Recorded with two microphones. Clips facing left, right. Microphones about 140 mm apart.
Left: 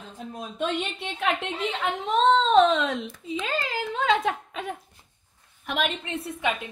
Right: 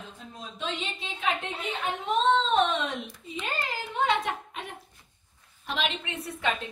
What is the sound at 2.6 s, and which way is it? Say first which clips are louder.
Speech: left 6 dB; 90° left.